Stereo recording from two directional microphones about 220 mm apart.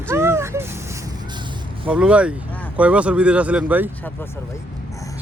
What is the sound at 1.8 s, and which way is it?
Speech, 5° right (ahead or behind).